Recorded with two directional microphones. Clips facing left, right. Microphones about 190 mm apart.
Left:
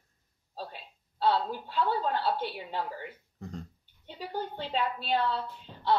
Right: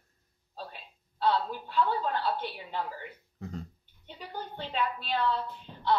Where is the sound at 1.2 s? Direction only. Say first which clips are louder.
Left 1 dB; 35° left (ahead or behind).